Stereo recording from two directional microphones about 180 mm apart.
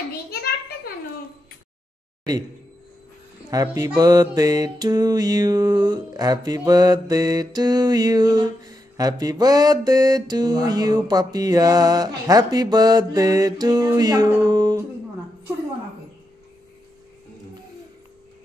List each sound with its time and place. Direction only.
3.4 s music: 20° right (ahead or behind)